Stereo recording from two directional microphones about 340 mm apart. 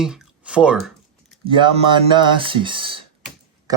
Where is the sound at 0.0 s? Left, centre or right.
Centre.